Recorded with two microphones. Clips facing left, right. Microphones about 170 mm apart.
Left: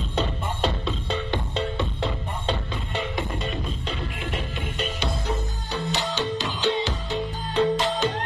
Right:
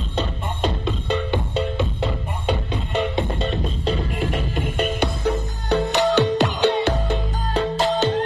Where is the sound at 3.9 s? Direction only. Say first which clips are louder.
Right 11 dB; 40° right (ahead or behind).